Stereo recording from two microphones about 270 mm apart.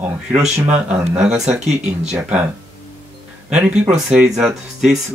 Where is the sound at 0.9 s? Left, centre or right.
Centre.